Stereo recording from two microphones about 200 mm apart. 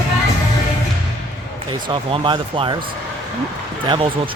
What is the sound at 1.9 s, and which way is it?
Speech, 25° right (ahead or behind).